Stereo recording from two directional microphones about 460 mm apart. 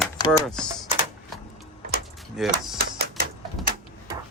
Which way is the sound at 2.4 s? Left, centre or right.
Centre.